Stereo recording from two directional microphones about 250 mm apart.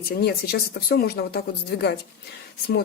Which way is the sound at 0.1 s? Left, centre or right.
Left.